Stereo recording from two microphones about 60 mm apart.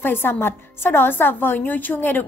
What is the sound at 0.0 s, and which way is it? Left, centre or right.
A woman's voice, left.